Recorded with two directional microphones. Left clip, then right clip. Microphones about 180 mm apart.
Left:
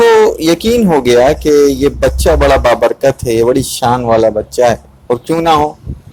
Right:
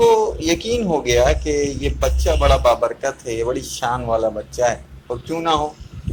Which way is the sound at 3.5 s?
45° left (ahead or behind).